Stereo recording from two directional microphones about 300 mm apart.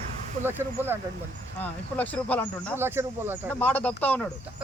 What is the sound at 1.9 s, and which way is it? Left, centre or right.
Speech, centre.